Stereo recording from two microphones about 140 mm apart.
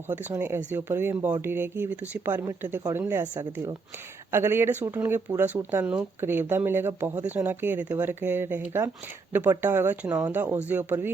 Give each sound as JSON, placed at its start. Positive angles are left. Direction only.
{"t": 0.1, "sound": "speech", "side_deg": -15}
{"t": 3.3, "sound": "speech", "side_deg": -30}
{"t": 4.3, "sound": "speech", "side_deg": -15}